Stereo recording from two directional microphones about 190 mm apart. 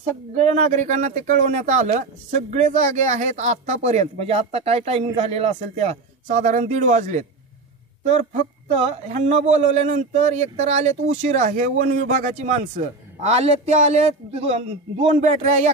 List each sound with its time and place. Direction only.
0.0 s speech: 40° right (ahead or behind)